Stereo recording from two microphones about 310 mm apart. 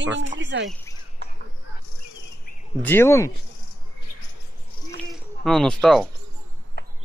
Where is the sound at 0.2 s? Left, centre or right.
Right.